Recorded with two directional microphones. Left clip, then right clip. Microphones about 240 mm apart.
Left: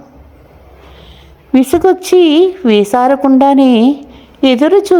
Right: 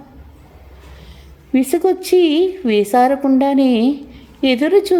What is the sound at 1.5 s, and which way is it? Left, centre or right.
A woman's voice, centre.